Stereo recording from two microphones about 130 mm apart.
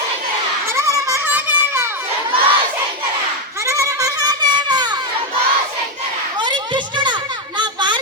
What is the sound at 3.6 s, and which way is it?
Goat, 20° right (ahead or behind).